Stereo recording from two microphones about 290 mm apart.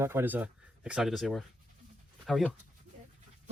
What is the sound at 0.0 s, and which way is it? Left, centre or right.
Speech, centre.